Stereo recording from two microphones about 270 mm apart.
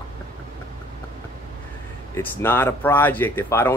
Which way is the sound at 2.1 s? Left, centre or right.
Centre.